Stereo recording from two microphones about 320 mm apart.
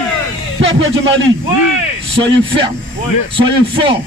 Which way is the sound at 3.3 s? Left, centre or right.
Centre.